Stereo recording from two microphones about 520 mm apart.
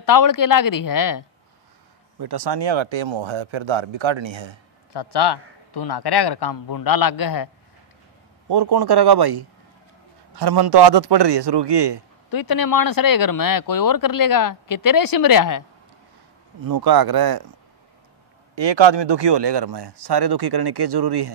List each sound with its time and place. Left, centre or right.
0.0 s speech: left
2.1 s speech: right
4.9 s a man's voice: left
8.5 s speech: right
12.3 s speech: left
16.6 s speech: right
18.5 s speech: right